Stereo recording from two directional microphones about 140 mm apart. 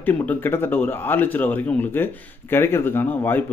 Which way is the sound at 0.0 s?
10° left (ahead or behind).